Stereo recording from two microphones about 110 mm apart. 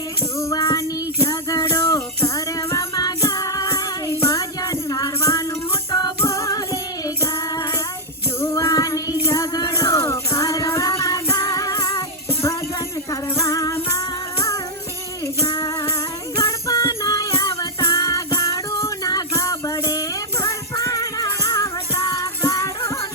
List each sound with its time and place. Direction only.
0.3 s music: 30° left (ahead or behind)
8.4 s child singing: 25° left (ahead or behind)
9.2 s music: 30° left (ahead or behind)
13.1 s music: 30° left (ahead or behind)
15.6 s music: 30° left (ahead or behind)